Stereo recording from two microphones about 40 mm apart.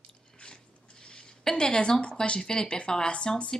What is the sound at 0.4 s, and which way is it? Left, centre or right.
Speech, left.